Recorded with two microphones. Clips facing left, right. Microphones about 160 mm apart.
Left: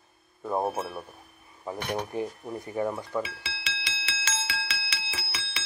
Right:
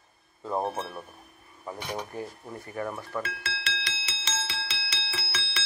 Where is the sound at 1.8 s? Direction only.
60° left (ahead or behind).